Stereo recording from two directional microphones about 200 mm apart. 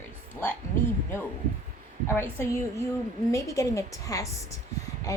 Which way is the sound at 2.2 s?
10° left (ahead or behind).